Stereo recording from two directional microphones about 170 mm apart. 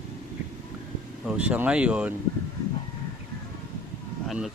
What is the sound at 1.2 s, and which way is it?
Speech, 5° right (ahead or behind).